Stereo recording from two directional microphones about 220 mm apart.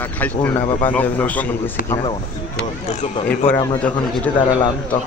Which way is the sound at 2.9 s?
30° left (ahead or behind).